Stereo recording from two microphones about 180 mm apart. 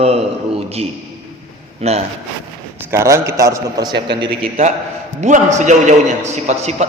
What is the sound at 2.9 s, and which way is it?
A man's voice, 15° right (ahead or behind).